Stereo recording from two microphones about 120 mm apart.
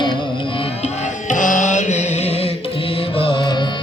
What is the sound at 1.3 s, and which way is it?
Music, 90° left.